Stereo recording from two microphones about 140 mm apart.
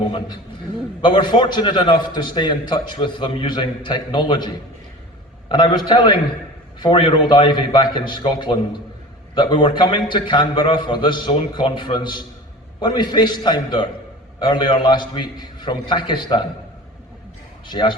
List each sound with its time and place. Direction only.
0.1 s a man's voice: 30° left (ahead or behind)
17.7 s a man's voice: 35° left (ahead or behind)